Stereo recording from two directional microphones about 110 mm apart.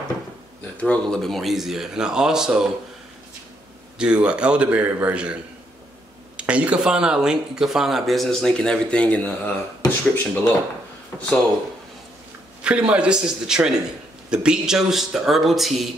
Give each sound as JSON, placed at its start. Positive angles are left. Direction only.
{"t": 0.7, "sound": "speech", "side_deg": 10}
{"t": 4.0, "sound": "a man's voice", "side_deg": -10}
{"t": 12.6, "sound": "a man's voice", "side_deg": -10}